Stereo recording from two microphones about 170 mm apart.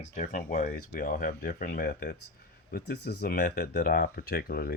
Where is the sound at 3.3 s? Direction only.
50° left (ahead or behind).